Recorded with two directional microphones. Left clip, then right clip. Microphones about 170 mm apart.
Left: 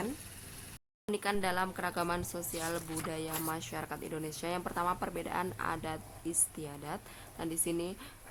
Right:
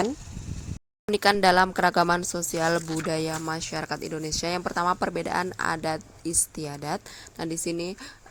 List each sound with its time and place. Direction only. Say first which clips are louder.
1.1 s speech: right 14 dB; 45° right (ahead or behind)